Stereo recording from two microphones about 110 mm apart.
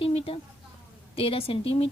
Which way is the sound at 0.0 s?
60° left (ahead or behind).